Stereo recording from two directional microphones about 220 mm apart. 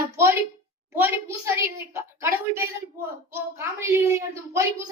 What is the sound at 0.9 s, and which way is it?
A woman's voice, 10° right (ahead or behind).